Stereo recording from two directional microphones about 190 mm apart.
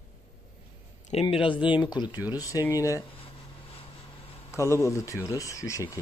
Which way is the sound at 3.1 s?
30° left (ahead or behind).